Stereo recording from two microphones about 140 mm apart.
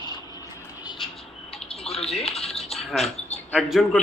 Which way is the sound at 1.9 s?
45° left (ahead or behind).